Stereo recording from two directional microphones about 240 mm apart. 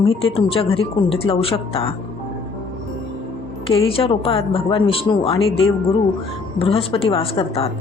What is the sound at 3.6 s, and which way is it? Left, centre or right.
Speech, left.